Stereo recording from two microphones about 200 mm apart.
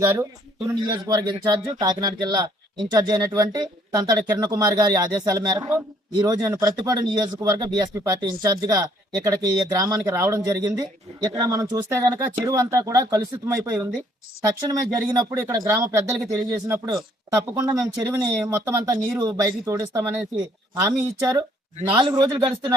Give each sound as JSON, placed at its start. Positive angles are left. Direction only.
{"t": 0.0, "sound": "speech", "side_deg": -15}